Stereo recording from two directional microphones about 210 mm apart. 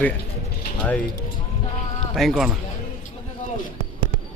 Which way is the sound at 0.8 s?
5° left (ahead or behind).